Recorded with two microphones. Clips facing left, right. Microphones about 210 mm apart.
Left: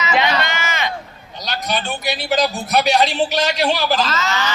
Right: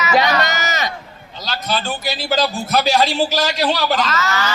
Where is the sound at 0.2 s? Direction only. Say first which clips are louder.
Right 2 dB; 40° right (ahead or behind).